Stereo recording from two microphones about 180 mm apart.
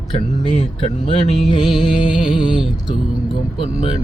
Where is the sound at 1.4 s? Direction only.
Centre (ahead or behind).